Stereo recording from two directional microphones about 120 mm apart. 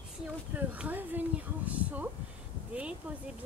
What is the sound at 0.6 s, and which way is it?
Speech, 15° right (ahead or behind).